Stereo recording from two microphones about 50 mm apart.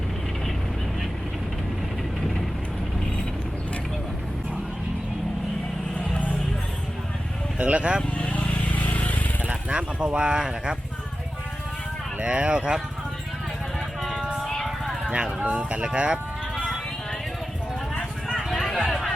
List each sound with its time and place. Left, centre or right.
7.6 s speech: right
8.2 s vehicle: left
9.4 s speech: right
12.2 s speech: right
14.0 s music: centre
14.4 s vehicle: centre
15.0 s speech: centre
16.6 s music: centre
18.3 s a sound: centre